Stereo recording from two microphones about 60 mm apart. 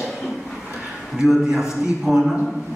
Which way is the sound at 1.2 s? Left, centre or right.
Centre.